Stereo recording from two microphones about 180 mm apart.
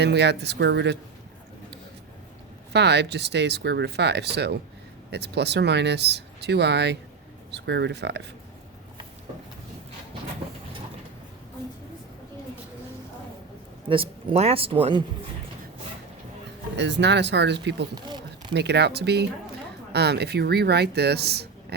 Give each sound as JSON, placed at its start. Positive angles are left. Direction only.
{"t": 0.0, "sound": "speech", "side_deg": -70}
{"t": 2.7, "sound": "speech", "side_deg": -70}
{"t": 13.8, "sound": "speech", "side_deg": -30}
{"t": 16.7, "sound": "speech", "side_deg": -75}
{"t": 17.9, "sound": "a sound", "side_deg": -25}
{"t": 18.5, "sound": "speech", "side_deg": -70}